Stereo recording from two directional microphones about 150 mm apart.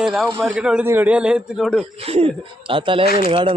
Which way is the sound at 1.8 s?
45° right (ahead or behind).